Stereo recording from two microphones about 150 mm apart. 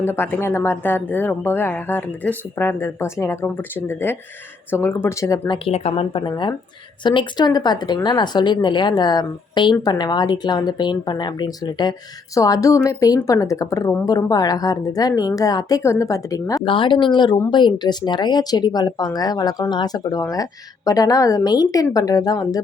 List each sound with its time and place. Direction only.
0.0 s speech: 15° left (ahead or behind)
5.6 s speech: 40° left (ahead or behind); by 16.6 s 20° left (ahead or behind)
16.6 s speech: 35° left (ahead or behind)